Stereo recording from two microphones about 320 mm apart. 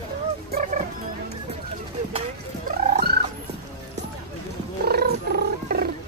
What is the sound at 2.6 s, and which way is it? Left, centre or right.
Speech, right.